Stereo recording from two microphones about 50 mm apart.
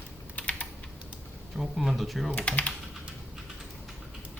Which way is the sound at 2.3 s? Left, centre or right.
Left.